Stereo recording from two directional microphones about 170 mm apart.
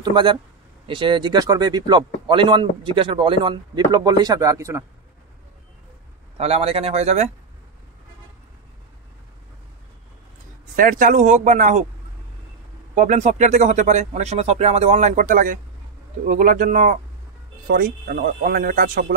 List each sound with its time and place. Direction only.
0.0 s a man's voice: 25° right (ahead or behind)
6.3 s a man's voice: 35° right (ahead or behind)
10.8 s speech: 50° right (ahead or behind)
12.9 s speech: 45° right (ahead or behind); by 19.1 s 60° right (ahead or behind)